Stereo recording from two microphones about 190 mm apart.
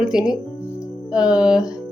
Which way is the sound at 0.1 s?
5° right (ahead or behind).